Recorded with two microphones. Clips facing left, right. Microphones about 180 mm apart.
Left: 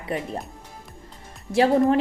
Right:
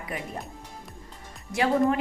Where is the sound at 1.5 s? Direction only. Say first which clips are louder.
Left 5 dB; 35° left (ahead or behind).